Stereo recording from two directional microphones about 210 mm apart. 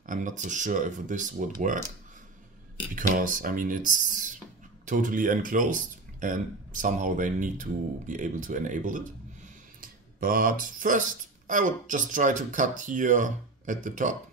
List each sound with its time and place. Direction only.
0.0 s speech: 35° right (ahead or behind)
2.9 s speech: 40° right (ahead or behind)